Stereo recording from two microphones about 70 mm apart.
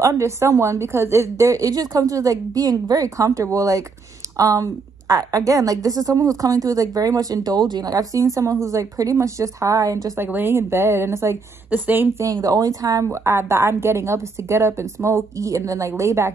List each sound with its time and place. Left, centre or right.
0.0 s a woman's voice: right
10.1 s speech: right
11.7 s a woman's voice: right
12.2 s a woman's voice: right